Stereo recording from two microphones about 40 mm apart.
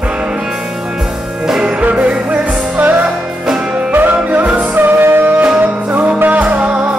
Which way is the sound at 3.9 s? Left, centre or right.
Right.